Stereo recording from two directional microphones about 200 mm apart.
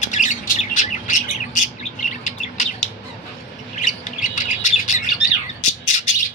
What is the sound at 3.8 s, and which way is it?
Bird, 40° left (ahead or behind).